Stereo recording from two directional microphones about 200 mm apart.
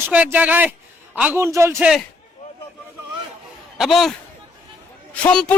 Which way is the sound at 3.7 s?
Centre (ahead or behind).